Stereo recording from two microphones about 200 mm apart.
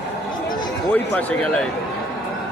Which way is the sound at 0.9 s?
5° left (ahead or behind).